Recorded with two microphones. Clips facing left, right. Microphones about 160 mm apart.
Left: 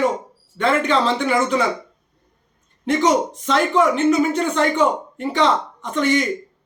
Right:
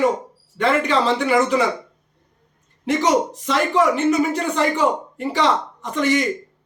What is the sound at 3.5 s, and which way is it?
Speech, centre (ahead or behind).